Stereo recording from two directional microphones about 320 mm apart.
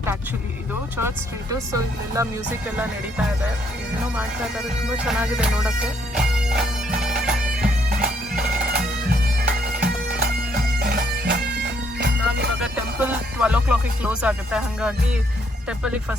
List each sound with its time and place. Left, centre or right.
0.9 s speech: centre
2.6 s music: centre
5.0 s bagpipes: centre
7.6 s bagpipes: right
9.5 s bagpipes: right
12.6 s music: centre